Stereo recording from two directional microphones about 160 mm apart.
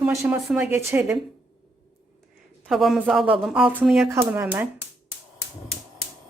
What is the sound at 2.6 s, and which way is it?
Speech, centre (ahead or behind).